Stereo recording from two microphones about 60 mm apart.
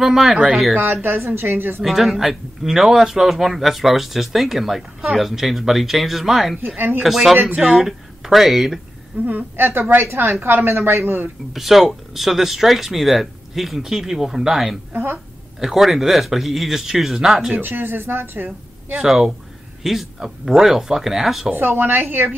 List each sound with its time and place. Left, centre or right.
0.0 s speech: centre
1.0 s a woman's voice: right
1.8 s speech: centre
9.2 s a woman's voice: right
11.5 s speech: centre
14.9 s a woman's voice: right
15.6 s speech: centre
17.6 s a woman's voice: right
18.9 s speech: centre
21.5 s a woman's voice: right